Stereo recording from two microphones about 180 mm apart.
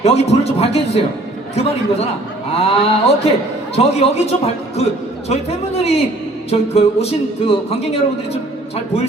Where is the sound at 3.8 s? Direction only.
35° left (ahead or behind).